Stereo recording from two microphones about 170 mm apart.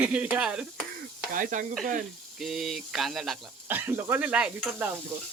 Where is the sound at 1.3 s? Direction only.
50° right (ahead or behind).